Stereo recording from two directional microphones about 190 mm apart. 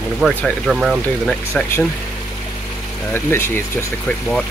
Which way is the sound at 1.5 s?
10° left (ahead or behind).